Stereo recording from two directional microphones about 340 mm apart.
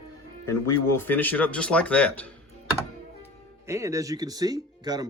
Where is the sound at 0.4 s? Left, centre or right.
Centre.